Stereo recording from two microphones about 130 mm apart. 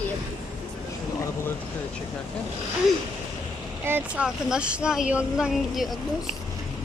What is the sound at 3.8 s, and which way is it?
Speech, 10° right (ahead or behind).